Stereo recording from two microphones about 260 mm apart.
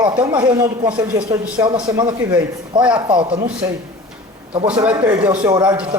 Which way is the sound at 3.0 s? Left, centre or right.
Centre.